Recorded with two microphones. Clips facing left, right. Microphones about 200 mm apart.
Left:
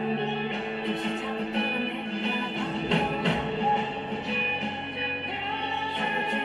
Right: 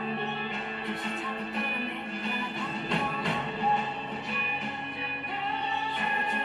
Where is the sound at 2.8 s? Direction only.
20° left (ahead or behind).